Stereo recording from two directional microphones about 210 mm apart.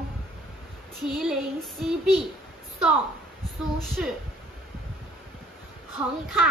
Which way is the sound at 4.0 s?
5° right (ahead or behind).